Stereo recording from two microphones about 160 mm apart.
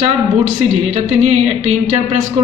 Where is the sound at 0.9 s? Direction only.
45° right (ahead or behind).